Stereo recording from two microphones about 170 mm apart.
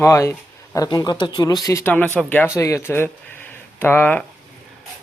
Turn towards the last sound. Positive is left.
turn(degrees=10)  # may be behind; listen again after turning